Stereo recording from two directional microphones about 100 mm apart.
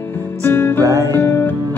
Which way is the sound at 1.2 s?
25° left (ahead or behind).